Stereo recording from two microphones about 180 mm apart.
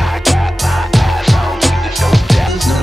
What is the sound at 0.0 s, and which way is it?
Music, centre (ahead or behind).